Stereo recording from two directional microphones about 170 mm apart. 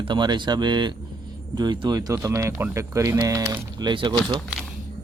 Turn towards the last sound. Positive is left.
turn(degrees=-25)  # may be behind; listen again after turning